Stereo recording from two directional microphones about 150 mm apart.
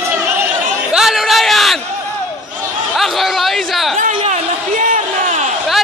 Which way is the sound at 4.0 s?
60° right (ahead or behind).